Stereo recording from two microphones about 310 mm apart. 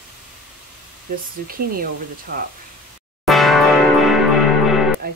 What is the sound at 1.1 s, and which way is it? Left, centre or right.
Speech, right.